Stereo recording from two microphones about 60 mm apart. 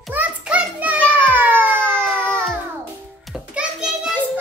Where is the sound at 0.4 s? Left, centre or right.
Right.